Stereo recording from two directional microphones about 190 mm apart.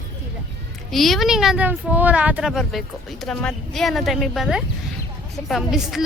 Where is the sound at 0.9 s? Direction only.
Centre (ahead or behind).